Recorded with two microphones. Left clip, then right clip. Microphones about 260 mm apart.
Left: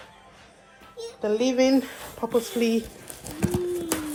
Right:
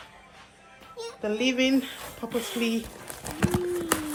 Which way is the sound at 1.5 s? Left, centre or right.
Centre.